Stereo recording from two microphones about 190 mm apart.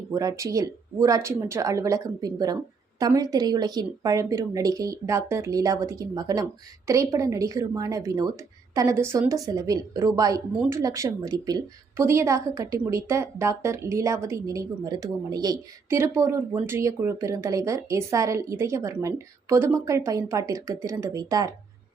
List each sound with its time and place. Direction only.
0.1 s a woman's voice: 15° right (ahead or behind)